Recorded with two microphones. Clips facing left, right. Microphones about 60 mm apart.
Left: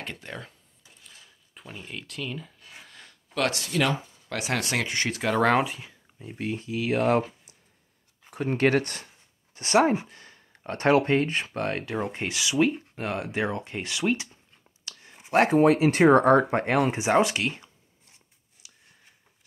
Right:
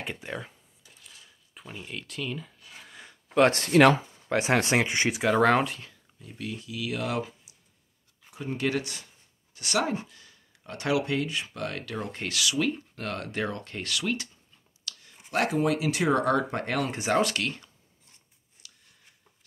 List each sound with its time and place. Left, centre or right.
0.0 s speech: centre
1.5 s speech: centre
2.9 s a sound: centre
3.5 s speech: right
4.3 s speech: right
5.2 s speech: centre
6.1 s speech: left
8.3 s speech: left; by 17.6 s centre
18.6 s a sound: centre